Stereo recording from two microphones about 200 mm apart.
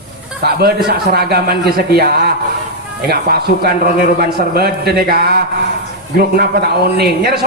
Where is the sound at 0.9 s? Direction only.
50° right (ahead or behind).